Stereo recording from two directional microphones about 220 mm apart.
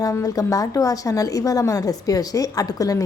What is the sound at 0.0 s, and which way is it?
Speech, 15° left (ahead or behind).